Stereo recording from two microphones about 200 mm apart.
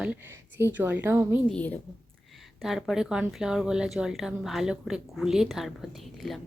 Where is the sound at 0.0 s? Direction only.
10° right (ahead or behind).